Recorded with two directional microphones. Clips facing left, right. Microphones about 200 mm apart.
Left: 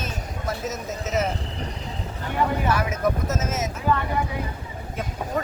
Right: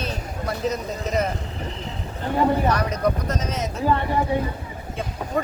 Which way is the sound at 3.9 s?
30° right (ahead or behind).